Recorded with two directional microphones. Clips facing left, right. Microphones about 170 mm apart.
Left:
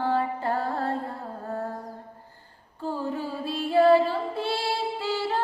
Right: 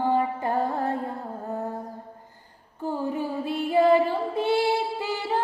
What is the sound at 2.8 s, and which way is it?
Child singing, 15° right (ahead or behind).